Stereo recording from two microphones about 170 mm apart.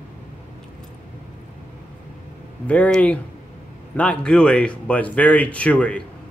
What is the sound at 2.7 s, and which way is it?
Speech, 10° left (ahead or behind).